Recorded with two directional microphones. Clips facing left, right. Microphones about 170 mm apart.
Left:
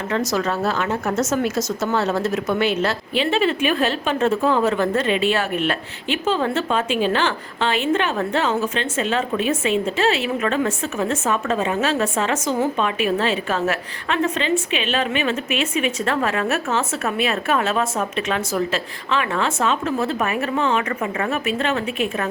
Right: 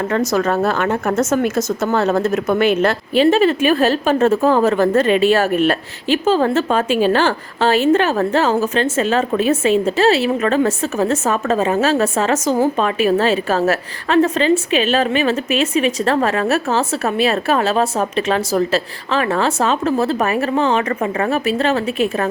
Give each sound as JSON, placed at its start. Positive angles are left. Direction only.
{"t": 0.3, "sound": "speech", "side_deg": -50}